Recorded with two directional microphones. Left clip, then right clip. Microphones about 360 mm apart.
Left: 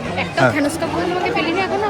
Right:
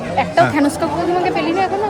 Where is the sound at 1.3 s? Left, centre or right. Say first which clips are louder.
Right 2 dB; right.